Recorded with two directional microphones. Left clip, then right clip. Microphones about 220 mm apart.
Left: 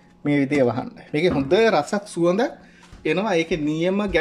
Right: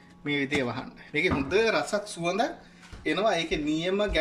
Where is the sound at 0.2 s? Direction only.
35° left (ahead or behind).